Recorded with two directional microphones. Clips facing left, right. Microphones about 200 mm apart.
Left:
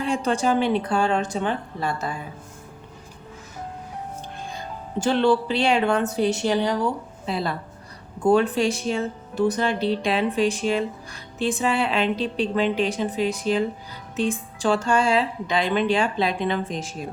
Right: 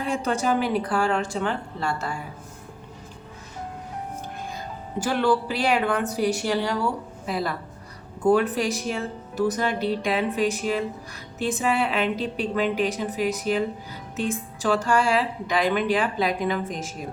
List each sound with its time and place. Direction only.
0.0 s a woman's voice: 30° left (ahead or behind)
4.5 s a woman's voice: 25° left (ahead or behind)